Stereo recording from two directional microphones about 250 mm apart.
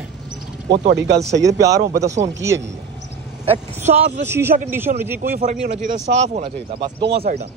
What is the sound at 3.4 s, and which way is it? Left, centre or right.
Speech, right.